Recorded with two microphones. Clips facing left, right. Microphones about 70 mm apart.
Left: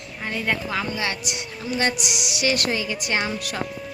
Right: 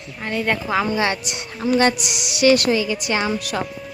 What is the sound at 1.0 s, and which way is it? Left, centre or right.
Speech, right.